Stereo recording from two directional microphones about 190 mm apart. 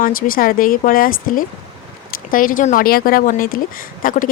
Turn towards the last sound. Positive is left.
turn(degrees=45)  # may be behind; listen again after turning